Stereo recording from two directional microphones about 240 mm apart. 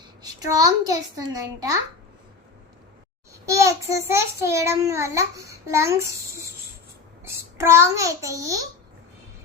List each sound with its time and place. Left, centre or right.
0.2 s a child's voice: centre
3.4 s a child's voice: centre